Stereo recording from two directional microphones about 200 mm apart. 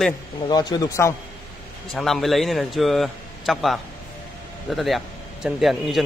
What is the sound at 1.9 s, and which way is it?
A man's voice, centre (ahead or behind).